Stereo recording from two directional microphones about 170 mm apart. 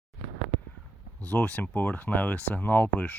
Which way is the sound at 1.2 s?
5° left (ahead or behind).